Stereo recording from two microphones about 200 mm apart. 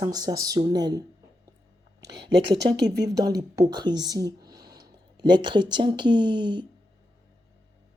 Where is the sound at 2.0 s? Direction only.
60° right (ahead or behind).